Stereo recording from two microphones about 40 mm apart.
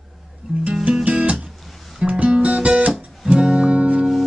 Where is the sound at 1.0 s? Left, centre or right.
Right.